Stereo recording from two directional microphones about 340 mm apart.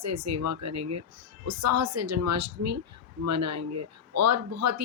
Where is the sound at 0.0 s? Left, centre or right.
Right.